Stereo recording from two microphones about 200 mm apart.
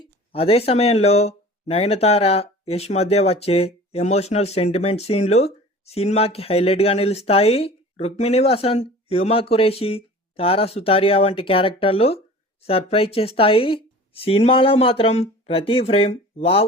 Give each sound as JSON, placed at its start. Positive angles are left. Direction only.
{"t": 0.0, "sound": "speech", "side_deg": 30}